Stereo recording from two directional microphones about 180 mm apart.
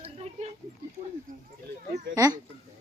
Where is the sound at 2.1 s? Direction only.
20° right (ahead or behind).